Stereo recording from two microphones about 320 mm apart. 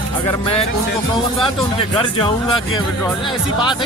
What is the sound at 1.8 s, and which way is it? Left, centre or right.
Speech, centre.